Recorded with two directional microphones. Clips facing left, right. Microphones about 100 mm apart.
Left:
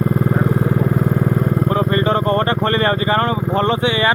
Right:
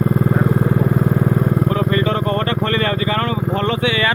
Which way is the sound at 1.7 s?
35° left (ahead or behind).